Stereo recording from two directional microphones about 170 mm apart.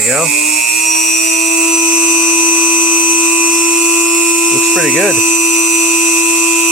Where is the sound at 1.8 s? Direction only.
35° left (ahead or behind).